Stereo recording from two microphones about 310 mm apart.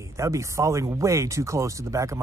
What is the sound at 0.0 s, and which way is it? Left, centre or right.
Speech, centre.